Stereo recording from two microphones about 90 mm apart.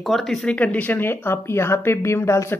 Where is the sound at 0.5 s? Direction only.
15° left (ahead or behind); by 2.5 s 35° left (ahead or behind).